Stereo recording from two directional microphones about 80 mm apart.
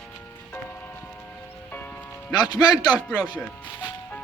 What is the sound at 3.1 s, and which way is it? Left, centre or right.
Speech, centre.